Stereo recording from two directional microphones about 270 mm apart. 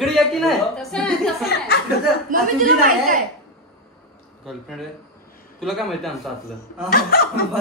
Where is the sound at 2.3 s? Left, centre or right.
Right.